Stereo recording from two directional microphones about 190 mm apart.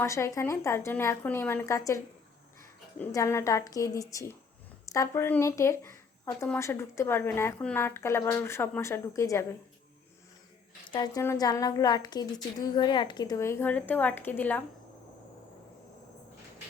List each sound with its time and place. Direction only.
0.0 s a woman's voice: 15° left (ahead or behind)
3.0 s a woman's voice: 15° left (ahead or behind)
10.9 s a woman's voice: 20° left (ahead or behind)